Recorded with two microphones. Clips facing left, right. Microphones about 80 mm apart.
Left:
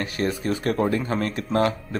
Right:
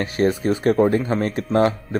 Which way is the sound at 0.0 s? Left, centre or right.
Right.